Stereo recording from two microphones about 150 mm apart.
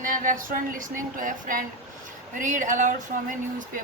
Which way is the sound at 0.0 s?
65° right (ahead or behind).